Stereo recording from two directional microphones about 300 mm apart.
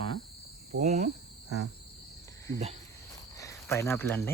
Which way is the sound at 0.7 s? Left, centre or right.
Right.